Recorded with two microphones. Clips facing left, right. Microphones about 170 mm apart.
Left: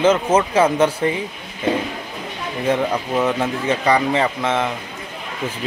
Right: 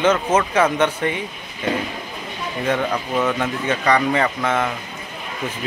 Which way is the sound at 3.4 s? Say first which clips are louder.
Left 2 dB; 30° left (ahead or behind).